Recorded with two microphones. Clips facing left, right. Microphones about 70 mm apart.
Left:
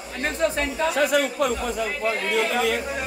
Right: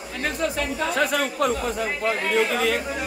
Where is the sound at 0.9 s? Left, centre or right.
Right.